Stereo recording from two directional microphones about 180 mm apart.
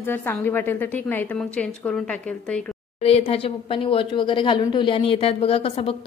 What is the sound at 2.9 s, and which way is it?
A woman's voice, 35° left (ahead or behind).